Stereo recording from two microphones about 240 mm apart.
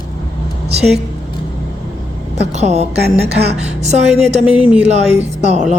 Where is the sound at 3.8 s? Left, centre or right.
Right.